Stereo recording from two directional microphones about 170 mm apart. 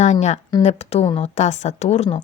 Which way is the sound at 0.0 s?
40° left (ahead or behind).